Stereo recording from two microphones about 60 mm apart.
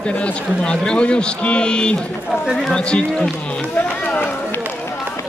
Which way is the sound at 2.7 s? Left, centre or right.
Centre.